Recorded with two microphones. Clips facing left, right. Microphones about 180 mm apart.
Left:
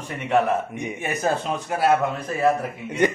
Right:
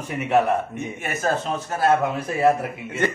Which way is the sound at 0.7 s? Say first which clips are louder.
Left 1 dB; 15° left (ahead or behind).